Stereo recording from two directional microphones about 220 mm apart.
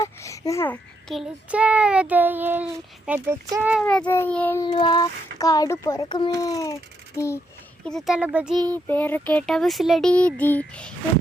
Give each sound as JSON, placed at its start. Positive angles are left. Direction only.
{"t": 0.0, "sound": "a child's voice", "side_deg": 15}
{"t": 4.0, "sound": "speech", "side_deg": 10}
{"t": 4.6, "sound": "speech", "side_deg": 20}
{"t": 7.9, "sound": "speech", "side_deg": 0}